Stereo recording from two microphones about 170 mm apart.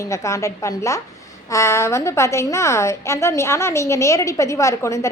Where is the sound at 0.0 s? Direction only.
15° left (ahead or behind).